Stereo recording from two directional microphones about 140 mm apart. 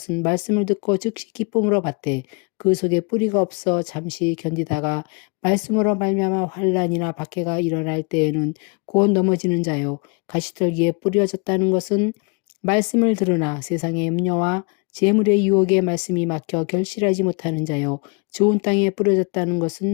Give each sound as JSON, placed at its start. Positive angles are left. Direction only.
{"t": 0.1, "sound": "speech", "side_deg": 30}
{"t": 19.5, "sound": "speech", "side_deg": 25}